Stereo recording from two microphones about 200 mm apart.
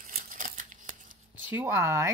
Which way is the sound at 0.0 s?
40° right (ahead or behind).